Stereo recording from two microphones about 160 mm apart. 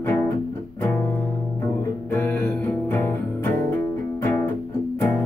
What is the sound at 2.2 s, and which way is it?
Music, 10° left (ahead or behind).